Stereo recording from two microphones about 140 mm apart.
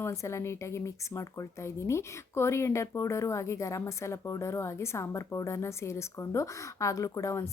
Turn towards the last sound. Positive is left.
turn(degrees=20)  # may be behind; listen again after turning